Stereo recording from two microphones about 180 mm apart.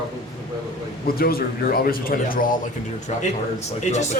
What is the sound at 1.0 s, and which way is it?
A man's voice, 55° left (ahead or behind).